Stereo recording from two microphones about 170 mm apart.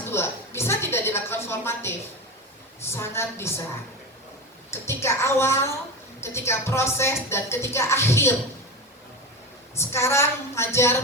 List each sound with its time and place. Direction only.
0.1 s a sound: 15° left (ahead or behind)
2.8 s a woman's voice: 15° left (ahead or behind)
4.7 s a woman's voice: 15° left (ahead or behind)
9.7 s a woman's voice: 15° left (ahead or behind)